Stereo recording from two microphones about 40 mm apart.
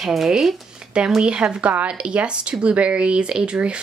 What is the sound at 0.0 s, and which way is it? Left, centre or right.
Speech, centre.